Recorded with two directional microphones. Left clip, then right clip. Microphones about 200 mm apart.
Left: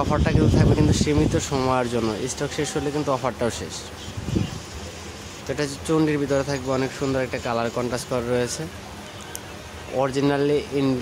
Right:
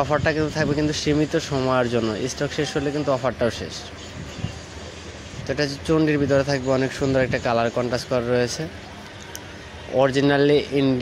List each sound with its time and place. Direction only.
0.0 s speech: 5° right (ahead or behind)
5.5 s speech: centre (ahead or behind)
9.9 s speech: 10° right (ahead or behind)